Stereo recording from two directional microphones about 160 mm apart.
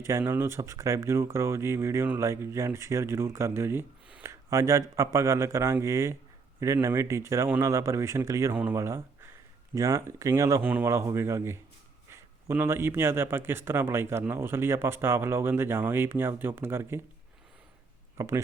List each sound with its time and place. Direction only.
0.0 s speech: 15° right (ahead or behind)
18.2 s speech: 20° right (ahead or behind)